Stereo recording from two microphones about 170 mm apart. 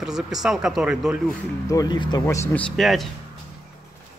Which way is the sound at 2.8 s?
Centre (ahead or behind).